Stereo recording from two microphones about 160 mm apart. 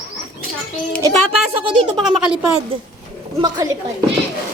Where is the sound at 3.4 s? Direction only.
20° right (ahead or behind).